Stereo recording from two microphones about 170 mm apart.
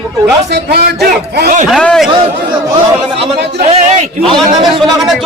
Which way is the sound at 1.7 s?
Centre (ahead or behind).